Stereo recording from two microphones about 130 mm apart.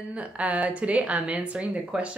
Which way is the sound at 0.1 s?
10° right (ahead or behind).